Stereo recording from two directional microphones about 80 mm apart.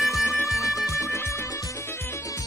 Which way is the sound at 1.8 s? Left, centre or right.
Left.